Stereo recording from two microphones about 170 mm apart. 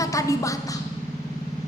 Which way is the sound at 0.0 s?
20° left (ahead or behind).